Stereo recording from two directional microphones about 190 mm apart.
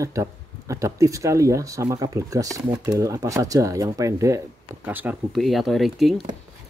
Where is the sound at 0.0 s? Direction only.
15° right (ahead or behind); by 6.2 s centre (ahead or behind).